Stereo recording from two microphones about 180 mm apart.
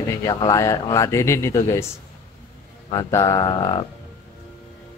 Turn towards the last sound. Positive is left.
turn(degrees=20)  # may be behind; listen again after turning